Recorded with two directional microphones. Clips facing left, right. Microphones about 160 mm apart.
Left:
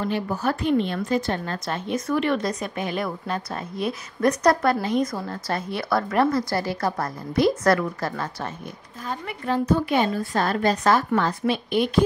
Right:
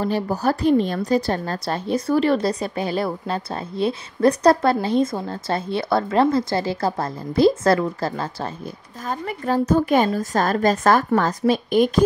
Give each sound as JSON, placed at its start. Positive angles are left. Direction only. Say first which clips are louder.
{"t": 0.0, "sound": "a woman's voice", "louder": "right 3 dB", "side_deg": -40}
{"t": 9.0, "sound": "a woman's voice", "louder": "right 4 dB", "side_deg": -45}